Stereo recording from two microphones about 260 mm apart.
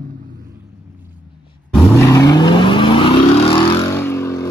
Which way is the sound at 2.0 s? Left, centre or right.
Centre.